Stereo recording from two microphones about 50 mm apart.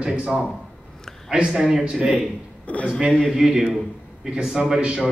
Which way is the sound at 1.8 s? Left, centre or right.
Centre.